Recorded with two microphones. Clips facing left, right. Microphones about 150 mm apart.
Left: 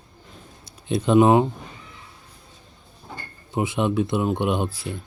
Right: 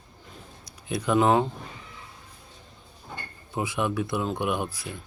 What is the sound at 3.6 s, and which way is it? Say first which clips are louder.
Speech: left 5 dB; 25° left (ahead or behind).